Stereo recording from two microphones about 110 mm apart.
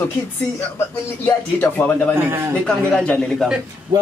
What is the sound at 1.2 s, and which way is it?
A man's voice, 15° left (ahead or behind).